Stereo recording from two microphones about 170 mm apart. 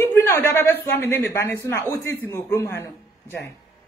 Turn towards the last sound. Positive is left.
turn(degrees=15)  # may be behind; listen again after turning